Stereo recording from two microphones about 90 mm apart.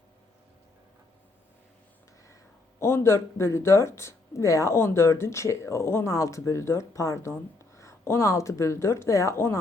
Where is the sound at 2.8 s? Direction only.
30° left (ahead or behind).